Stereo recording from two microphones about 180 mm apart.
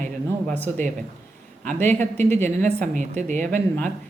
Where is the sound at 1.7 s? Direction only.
10° left (ahead or behind).